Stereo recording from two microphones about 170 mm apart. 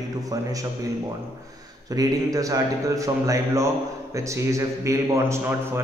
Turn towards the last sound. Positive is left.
turn(degrees=-20)  # may be behind; listen again after turning